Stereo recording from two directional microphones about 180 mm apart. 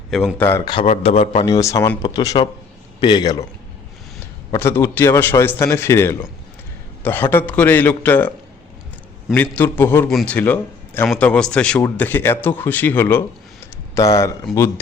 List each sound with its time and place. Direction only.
0.1 s speech: centre (ahead or behind)
0.4 s speech: 15° left (ahead or behind)
0.9 s a man's voice: 35° left (ahead or behind)
1.5 s speech: 20° left (ahead or behind)
4.5 s speech: 15° left (ahead or behind)
9.3 s speech: 10° left (ahead or behind)